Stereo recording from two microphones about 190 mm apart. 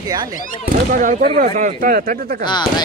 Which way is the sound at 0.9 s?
45° right (ahead or behind).